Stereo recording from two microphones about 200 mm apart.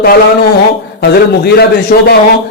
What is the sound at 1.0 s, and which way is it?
A man's voice, 55° left (ahead or behind).